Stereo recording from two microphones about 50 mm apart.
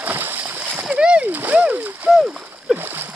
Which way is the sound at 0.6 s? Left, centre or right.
Right.